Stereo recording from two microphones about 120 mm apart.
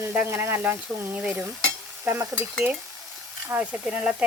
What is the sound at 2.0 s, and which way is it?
Stir, 25° right (ahead or behind).